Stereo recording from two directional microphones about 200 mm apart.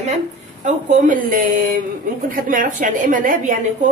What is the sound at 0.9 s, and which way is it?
Speech, 40° right (ahead or behind).